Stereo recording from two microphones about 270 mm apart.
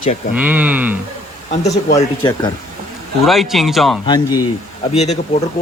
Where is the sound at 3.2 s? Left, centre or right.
Centre.